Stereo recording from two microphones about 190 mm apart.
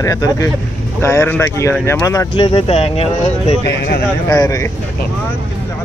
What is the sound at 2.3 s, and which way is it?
Speech, 30° left (ahead or behind).